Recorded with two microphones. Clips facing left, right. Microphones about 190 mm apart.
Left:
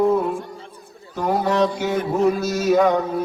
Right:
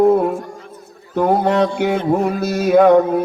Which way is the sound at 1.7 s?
65° right (ahead or behind).